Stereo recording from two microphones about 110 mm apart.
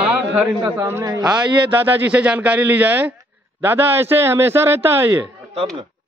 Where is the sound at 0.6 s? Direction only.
25° right (ahead or behind).